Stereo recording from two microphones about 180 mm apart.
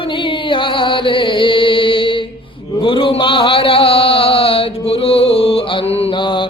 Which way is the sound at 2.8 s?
30° left (ahead or behind).